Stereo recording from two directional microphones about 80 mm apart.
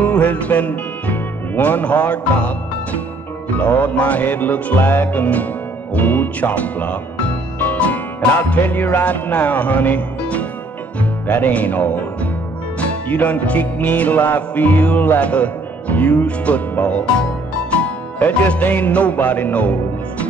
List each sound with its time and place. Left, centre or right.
0.0 s music: centre